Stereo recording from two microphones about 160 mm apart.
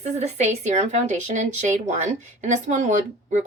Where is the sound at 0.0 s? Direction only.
45° right (ahead or behind).